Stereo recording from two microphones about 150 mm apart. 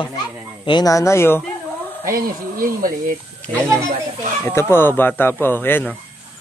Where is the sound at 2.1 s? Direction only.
70° right (ahead or behind).